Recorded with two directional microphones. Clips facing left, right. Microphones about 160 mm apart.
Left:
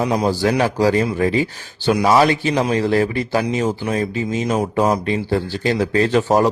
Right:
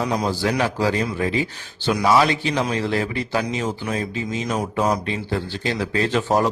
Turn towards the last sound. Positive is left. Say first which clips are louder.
# left 4 dB
turn(degrees=40)  # may be behind; listen again after turning